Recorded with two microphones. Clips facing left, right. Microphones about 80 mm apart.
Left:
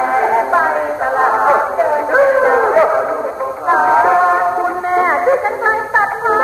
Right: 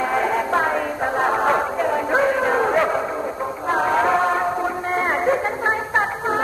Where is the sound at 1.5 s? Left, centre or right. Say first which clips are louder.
Left 7 dB; left.